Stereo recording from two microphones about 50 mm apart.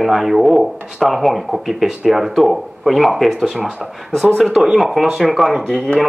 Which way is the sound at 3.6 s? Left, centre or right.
Right.